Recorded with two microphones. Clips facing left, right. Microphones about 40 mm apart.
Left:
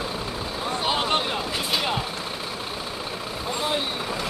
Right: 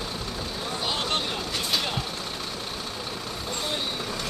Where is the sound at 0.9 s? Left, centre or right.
Centre.